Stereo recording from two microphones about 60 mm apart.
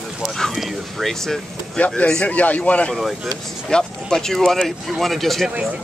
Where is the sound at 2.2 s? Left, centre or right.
Left.